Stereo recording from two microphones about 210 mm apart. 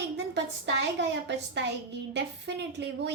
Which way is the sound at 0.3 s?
55° right (ahead or behind).